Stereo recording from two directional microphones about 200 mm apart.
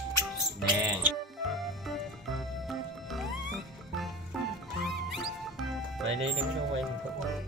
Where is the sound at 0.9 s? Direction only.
Centre (ahead or behind).